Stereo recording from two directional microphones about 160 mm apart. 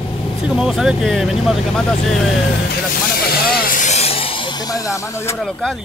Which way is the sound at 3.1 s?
70° left (ahead or behind).